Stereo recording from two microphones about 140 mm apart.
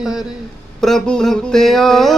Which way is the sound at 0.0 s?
5° right (ahead or behind).